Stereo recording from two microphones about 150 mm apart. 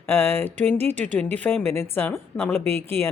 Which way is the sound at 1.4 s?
10° left (ahead or behind).